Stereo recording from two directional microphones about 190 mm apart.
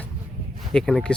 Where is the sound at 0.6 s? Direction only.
Centre (ahead or behind).